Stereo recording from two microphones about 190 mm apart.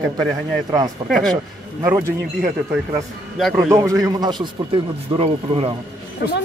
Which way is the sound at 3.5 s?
15° right (ahead or behind).